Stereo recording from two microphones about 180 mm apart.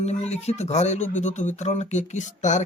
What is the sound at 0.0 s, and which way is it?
Speech, 40° left (ahead or behind).